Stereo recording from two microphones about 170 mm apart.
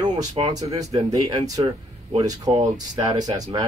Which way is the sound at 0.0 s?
25° right (ahead or behind).